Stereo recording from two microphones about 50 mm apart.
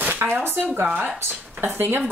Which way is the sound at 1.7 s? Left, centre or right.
Right.